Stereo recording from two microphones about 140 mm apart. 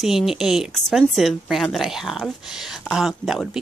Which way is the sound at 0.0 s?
Centre (ahead or behind).